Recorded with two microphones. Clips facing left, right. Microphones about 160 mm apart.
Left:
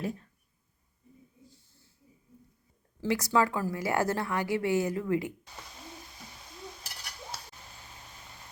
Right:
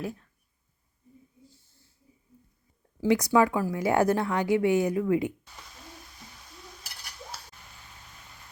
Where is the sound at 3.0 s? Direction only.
15° right (ahead or behind).